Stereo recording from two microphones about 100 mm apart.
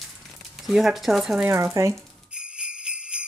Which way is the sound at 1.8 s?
30° right (ahead or behind).